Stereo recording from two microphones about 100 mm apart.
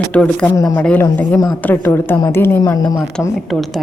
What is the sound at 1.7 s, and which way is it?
Speech, 20° left (ahead or behind).